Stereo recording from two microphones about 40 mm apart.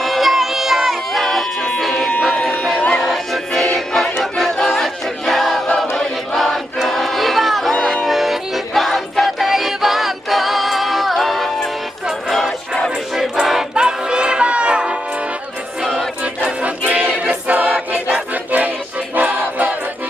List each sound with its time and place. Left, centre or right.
0.0 s music: centre
1.8 s a sound: centre
2.7 s music: left
3.0 s music: centre
5.7 s choir: centre
6.3 s choir: centre
8.0 s music: centre
13.1 s music: centre
13.7 s music: right
16.6 s music: right
17.5 s choir: right
19.1 s music: right